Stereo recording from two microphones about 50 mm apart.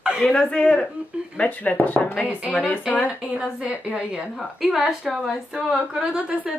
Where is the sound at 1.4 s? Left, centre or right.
Left.